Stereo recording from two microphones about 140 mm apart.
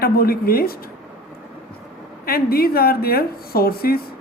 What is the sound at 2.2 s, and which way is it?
A woman's voice, 90° left.